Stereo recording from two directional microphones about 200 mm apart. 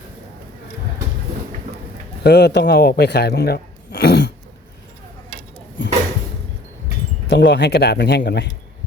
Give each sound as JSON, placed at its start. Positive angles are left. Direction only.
{"t": 2.2, "sound": "speech", "side_deg": 55}
{"t": 7.3, "sound": "speech", "side_deg": 55}